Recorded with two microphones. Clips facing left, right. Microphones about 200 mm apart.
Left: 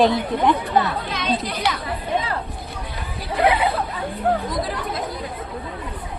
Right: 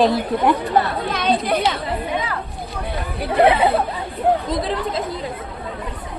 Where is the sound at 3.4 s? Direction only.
25° right (ahead or behind).